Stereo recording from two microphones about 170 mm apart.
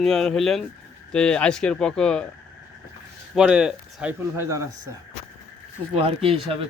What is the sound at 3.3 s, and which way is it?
Speech, 5° right (ahead or behind).